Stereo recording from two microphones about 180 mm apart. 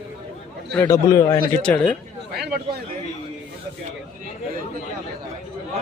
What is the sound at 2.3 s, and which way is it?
Speech, 60° right (ahead or behind).